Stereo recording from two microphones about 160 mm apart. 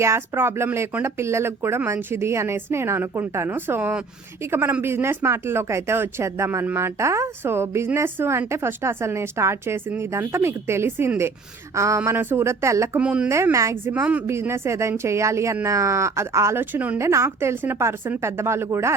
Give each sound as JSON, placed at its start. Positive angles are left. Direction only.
{"t": 0.0, "sound": "speech", "side_deg": -15}
{"t": 13.0, "sound": "speech", "side_deg": -10}